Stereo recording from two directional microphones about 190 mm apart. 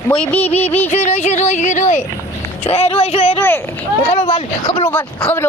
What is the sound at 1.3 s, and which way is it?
Speech, 35° left (ahead or behind).